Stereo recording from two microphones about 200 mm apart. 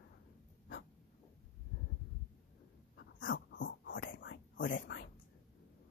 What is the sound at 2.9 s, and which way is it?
Whispering, 70° left (ahead or behind).